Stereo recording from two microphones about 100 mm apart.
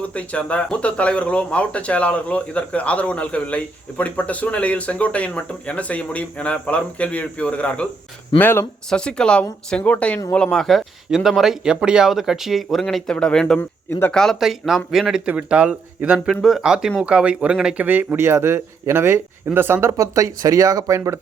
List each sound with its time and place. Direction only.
0.1 s speech: 15° left (ahead or behind)
8.9 s speech: 10° left (ahead or behind)
13.6 s speech: 20° left (ahead or behind)
14.1 s speech: 5° left (ahead or behind); by 16.3 s 10° right (ahead or behind)
16.3 s speech: centre (ahead or behind)
17.8 s speech: 20° right (ahead or behind)